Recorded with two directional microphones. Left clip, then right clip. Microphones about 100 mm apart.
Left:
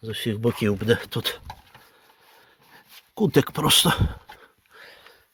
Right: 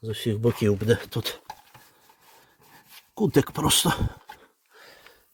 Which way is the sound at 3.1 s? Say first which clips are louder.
Left 2 dB; 15° right (ahead or behind).